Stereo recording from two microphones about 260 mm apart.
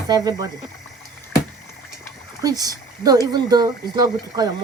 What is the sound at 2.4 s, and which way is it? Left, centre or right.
Speech, centre.